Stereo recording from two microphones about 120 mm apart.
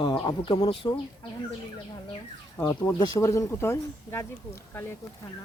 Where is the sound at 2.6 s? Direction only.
25° left (ahead or behind).